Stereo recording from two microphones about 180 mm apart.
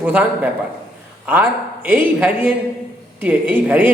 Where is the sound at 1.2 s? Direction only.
10° right (ahead or behind).